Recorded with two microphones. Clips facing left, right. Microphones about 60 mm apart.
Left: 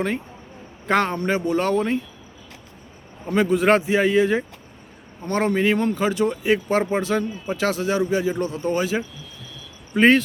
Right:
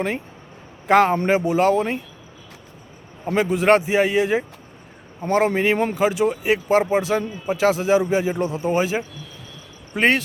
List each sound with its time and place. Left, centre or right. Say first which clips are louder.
0.9 s speech: right 5 dB; centre
3.3 s speech: right 1 dB; centre
5.5 s a man's voice: even; centre
9.9 s speech: left 3 dB; centre